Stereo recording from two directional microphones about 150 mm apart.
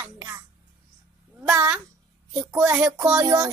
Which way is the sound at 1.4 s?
10° right (ahead or behind).